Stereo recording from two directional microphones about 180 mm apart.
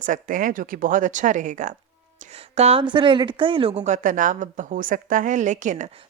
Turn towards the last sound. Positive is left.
turn(degrees=-45)  # may be behind; listen again after turning